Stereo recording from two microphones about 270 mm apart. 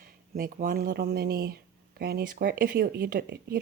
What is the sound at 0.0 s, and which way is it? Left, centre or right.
A woman's voice, right.